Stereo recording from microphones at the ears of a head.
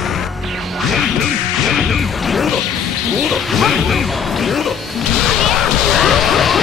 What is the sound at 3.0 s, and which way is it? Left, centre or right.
Music, left.